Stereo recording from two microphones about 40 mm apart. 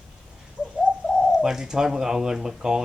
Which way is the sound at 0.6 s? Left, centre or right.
Left.